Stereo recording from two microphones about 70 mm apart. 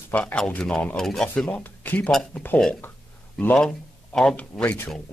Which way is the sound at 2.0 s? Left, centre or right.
Centre.